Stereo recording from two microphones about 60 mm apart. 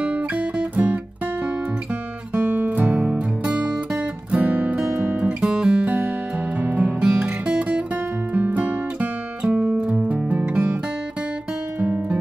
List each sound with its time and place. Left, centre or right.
0.0 s music: right
11.8 s music: right